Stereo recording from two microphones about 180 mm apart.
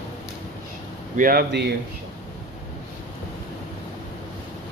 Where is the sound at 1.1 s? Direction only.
55° right (ahead or behind).